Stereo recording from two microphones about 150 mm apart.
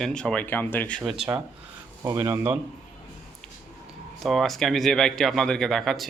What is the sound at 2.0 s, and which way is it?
Speech, 25° right (ahead or behind).